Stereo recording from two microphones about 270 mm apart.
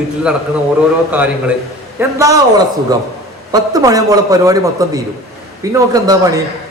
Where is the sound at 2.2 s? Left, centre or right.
Centre.